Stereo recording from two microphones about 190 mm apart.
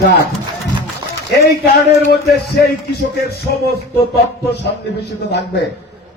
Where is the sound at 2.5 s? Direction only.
55° left (ahead or behind).